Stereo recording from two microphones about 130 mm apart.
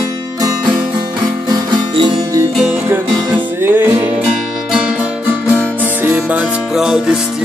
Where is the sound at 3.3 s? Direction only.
15° right (ahead or behind).